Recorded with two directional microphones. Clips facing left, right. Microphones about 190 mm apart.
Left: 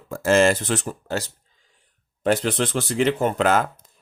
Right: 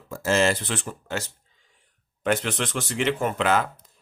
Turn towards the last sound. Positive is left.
turn(degrees=45)  # may be behind; listen again after turning